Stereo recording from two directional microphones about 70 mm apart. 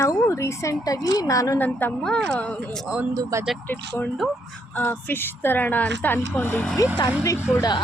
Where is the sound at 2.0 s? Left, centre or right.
Centre.